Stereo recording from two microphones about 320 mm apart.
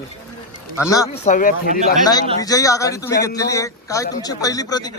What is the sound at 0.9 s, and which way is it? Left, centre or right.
Speech, centre.